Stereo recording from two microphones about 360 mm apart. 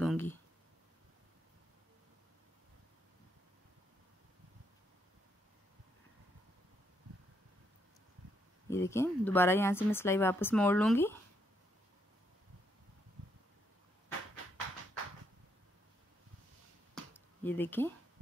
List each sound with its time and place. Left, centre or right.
0.0 s a sound: centre
8.6 s speech: centre
16.9 s finger snapping: centre